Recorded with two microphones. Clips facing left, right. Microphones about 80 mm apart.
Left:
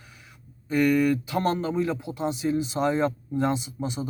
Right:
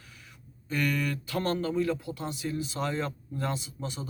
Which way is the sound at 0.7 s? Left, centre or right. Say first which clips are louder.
Left 9 dB; centre.